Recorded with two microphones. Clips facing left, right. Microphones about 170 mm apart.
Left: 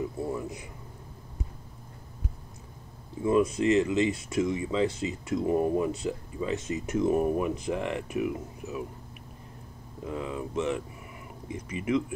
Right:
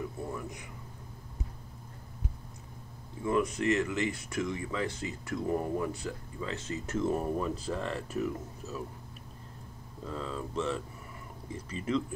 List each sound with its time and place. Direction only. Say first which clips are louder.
0.0 s a sound: left 6 dB; 20° left (ahead or behind)
3.3 s speech: left 5 dB; 20° left (ahead or behind)
10.0 s speech: left 4 dB; 15° left (ahead or behind)